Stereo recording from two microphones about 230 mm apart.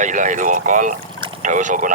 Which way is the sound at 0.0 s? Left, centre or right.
Right.